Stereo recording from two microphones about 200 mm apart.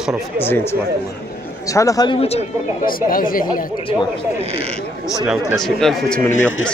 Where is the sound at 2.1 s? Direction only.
30° left (ahead or behind).